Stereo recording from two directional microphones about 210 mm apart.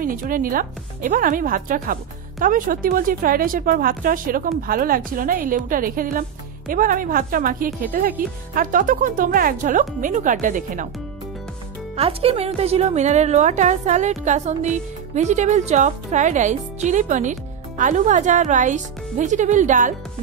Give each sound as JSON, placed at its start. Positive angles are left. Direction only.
{"t": 0.0, "sound": "a woman's voice", "side_deg": -40}
{"t": 12.0, "sound": "a woman's voice", "side_deg": -30}